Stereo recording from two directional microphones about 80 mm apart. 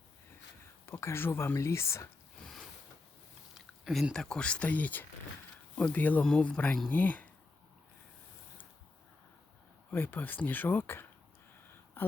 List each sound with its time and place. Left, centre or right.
0.9 s speech: left
2.4 s a sound: centre
3.8 s speech: centre
4.1 s speech: centre
6.2 s speech: centre
9.9 s speech: left
12.0 s a sound: left